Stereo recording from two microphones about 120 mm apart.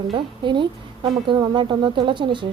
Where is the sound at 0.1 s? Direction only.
45° right (ahead or behind).